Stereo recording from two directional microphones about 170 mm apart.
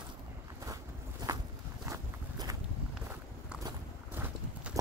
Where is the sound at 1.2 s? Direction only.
25° right (ahead or behind).